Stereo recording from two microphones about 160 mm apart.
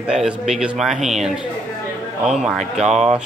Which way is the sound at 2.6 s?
45° right (ahead or behind).